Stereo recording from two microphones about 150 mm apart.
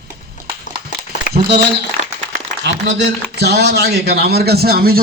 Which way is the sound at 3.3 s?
90° right.